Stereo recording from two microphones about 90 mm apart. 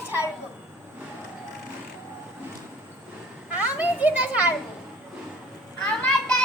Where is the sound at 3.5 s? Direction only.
15° right (ahead or behind).